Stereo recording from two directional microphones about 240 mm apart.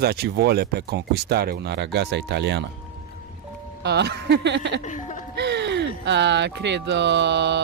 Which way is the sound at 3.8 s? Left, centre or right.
Right.